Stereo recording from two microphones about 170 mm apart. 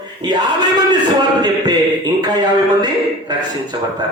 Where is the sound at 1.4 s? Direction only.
25° right (ahead or behind).